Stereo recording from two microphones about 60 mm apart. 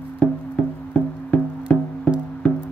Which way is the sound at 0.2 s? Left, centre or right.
Centre.